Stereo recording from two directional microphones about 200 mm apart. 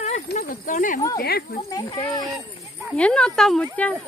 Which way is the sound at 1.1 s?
50° left (ahead or behind).